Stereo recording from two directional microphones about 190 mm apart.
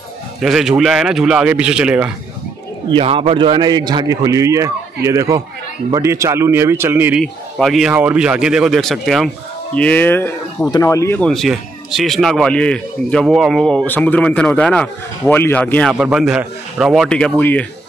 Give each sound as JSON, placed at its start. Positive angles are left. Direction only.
{"t": 0.4, "sound": "speech", "side_deg": 0}
{"t": 2.9, "sound": "a man's voice", "side_deg": -30}